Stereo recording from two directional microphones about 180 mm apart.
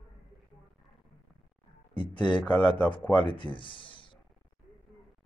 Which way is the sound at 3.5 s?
30° left (ahead or behind).